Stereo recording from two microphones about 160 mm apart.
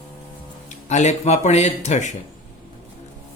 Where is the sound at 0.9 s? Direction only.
45° left (ahead or behind).